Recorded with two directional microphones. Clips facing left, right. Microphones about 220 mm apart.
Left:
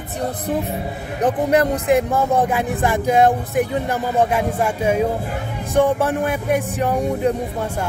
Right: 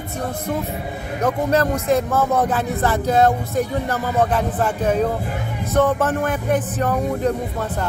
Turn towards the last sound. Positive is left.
turn(degrees=15)  # may be behind; listen again after turning